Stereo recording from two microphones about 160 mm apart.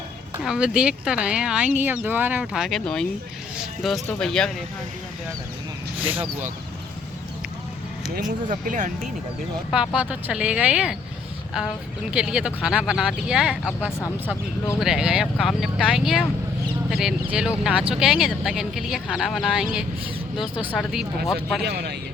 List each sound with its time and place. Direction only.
0.4 s speech: 5° right (ahead or behind)
6.0 s speech: 10° right (ahead or behind)
8.4 s speech: 55° right (ahead or behind)
9.7 s speech: 5° right (ahead or behind)
12.1 s speech: 5° right (ahead or behind)
14.8 s speech: 5° right (ahead or behind)
20.7 s speech: 5° right (ahead or behind)
21.6 s speech: 90° right